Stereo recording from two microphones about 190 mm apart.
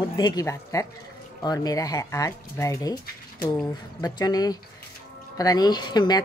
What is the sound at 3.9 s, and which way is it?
Speech, 20° left (ahead or behind).